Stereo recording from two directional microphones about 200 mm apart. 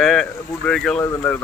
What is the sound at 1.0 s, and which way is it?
Speech, 15° left (ahead or behind).